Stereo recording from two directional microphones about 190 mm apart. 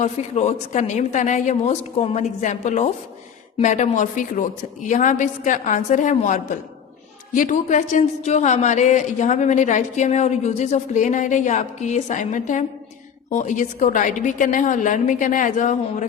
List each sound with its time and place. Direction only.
0.0 s a woman's voice: 35° left (ahead or behind)